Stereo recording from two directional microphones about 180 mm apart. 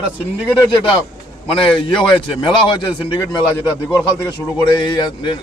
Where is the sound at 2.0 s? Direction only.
25° left (ahead or behind).